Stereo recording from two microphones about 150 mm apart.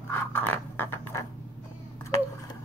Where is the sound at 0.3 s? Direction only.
15° left (ahead or behind).